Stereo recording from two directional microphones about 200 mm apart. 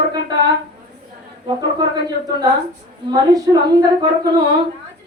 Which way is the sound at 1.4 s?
20° right (ahead or behind).